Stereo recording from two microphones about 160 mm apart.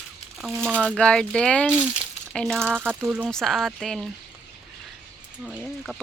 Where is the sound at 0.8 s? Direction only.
5° left (ahead or behind).